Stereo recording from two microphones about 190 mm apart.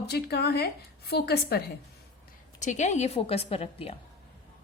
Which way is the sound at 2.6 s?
40° left (ahead or behind).